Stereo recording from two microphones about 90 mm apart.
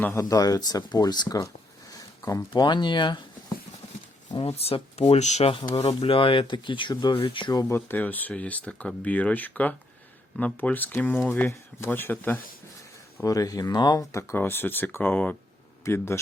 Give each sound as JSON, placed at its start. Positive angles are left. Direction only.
{"t": 0.0, "sound": "speech", "side_deg": 35}
{"t": 1.9, "sound": "a sound", "side_deg": 40}
{"t": 2.5, "sound": "speech", "side_deg": 55}
{"t": 4.6, "sound": "speech", "side_deg": 90}
{"t": 6.9, "sound": "speech", "side_deg": 50}
{"t": 7.2, "sound": "speech", "side_deg": 70}
{"t": 7.7, "sound": "speech", "side_deg": 20}
{"t": 13.2, "sound": "speech", "side_deg": 40}
{"t": 14.0, "sound": "speech", "side_deg": 35}
{"t": 15.8, "sound": "speech", "side_deg": 30}